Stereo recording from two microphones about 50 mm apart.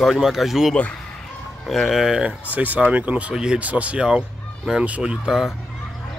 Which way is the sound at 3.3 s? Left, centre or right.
Centre.